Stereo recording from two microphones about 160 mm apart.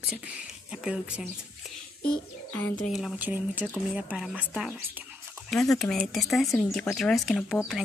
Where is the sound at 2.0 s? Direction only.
10° left (ahead or behind).